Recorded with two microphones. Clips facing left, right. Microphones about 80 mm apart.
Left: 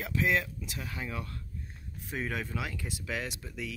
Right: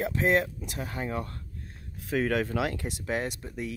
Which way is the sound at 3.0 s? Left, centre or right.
Right.